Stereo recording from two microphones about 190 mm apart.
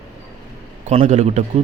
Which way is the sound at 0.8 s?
35° right (ahead or behind).